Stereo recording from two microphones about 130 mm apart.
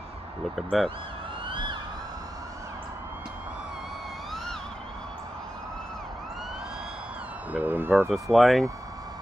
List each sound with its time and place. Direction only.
0.6 s speech: centre (ahead or behind)
1.5 s police car: 35° right (ahead or behind)
7.5 s speech: 15° right (ahead or behind)
8.1 s speech: centre (ahead or behind)